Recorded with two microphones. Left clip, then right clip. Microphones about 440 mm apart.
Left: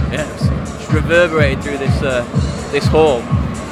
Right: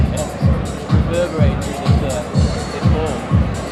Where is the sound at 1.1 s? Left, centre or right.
Left.